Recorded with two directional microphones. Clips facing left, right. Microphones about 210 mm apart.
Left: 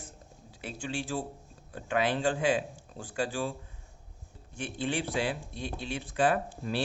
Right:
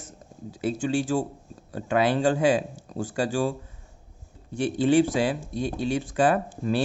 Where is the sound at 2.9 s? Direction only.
45° right (ahead or behind).